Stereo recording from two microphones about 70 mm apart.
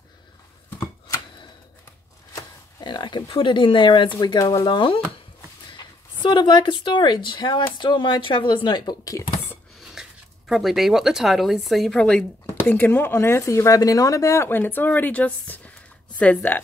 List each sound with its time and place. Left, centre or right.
2.8 s speech: left
4.2 s speech: left
6.3 s speech: left
10.0 s a sound: centre
10.5 s speech: centre
12.0 s speech: centre
12.5 s speech: left